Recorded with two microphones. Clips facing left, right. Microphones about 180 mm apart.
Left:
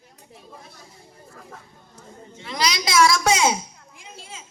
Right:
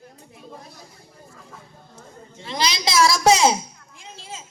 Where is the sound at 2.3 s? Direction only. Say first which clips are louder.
Even; 30° right (ahead or behind).